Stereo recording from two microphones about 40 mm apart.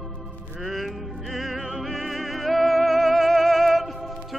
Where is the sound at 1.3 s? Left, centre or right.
Centre.